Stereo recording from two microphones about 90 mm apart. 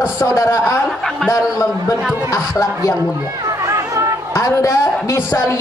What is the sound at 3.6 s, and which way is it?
Chatter, 35° right (ahead or behind).